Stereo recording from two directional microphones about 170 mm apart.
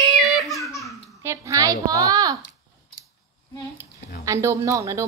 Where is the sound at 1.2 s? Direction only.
20° right (ahead or behind).